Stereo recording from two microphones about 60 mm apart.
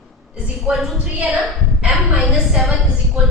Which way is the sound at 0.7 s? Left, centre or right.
Centre.